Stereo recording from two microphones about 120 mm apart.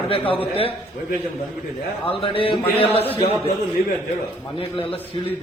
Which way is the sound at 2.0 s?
50° left (ahead or behind).